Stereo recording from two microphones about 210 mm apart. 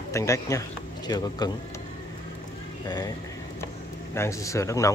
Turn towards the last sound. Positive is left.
turn(degrees=15)  # may be behind; listen again after turning